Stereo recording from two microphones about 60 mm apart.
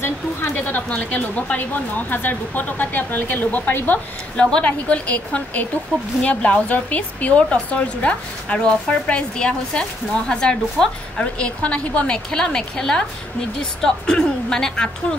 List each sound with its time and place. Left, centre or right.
0.7 s a woman's voice: left
4.4 s a woman's voice: centre